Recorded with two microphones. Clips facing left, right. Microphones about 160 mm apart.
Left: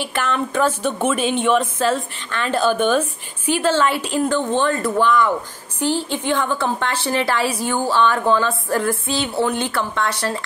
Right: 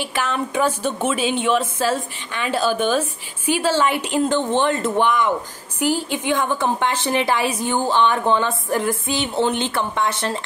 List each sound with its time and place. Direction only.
0.1 s a woman's voice: 10° right (ahead or behind)
1.1 s speech: 55° left (ahead or behind)
1.4 s a woman's voice: 5° right (ahead or behind); by 10.4 s 20° right (ahead or behind)